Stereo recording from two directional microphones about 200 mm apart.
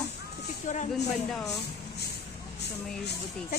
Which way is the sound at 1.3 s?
Centre (ahead or behind).